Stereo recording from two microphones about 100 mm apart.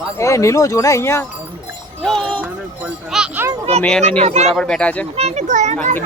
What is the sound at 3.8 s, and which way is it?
Speech, 5° left (ahead or behind).